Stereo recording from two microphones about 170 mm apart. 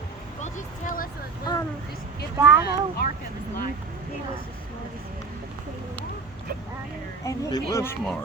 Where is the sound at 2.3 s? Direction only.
10° right (ahead or behind).